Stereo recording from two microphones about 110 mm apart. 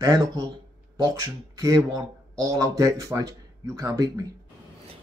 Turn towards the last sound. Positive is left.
turn(degrees=-30)  # may be behind; listen again after turning